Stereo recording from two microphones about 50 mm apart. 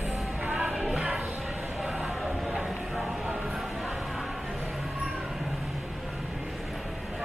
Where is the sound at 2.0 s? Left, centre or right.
Centre.